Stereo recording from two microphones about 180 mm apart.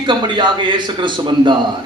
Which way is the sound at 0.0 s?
25° right (ahead or behind).